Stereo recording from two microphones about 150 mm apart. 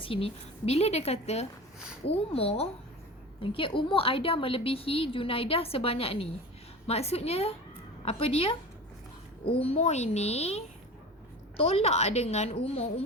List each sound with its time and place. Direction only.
0.0 s a woman's voice: 40° left (ahead or behind)